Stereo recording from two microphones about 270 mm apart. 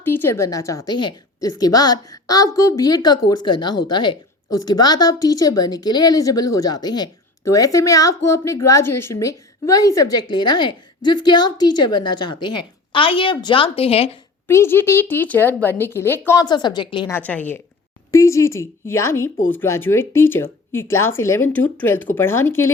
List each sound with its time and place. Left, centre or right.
0.0 s a woman's voice: centre
11.9 s a woman's voice: left
12.2 s a woman's voice: centre
14.4 s a woman's voice: centre